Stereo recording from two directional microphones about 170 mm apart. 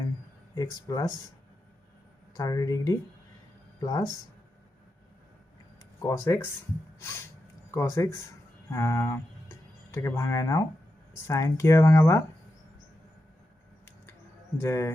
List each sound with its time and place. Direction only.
0.5 s speech: 20° left (ahead or behind)
2.3 s speech: 20° left (ahead or behind)
6.0 s speech: 20° left (ahead or behind)
14.6 s speech: 15° left (ahead or behind)